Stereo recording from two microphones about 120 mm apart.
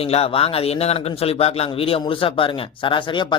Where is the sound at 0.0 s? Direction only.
55° left (ahead or behind).